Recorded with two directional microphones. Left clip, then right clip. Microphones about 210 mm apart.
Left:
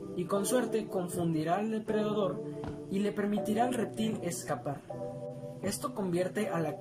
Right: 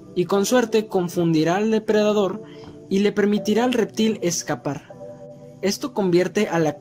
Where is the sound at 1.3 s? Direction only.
45° right (ahead or behind).